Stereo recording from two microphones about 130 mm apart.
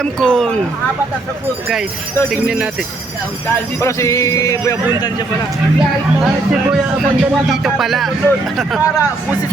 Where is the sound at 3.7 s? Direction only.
25° left (ahead or behind).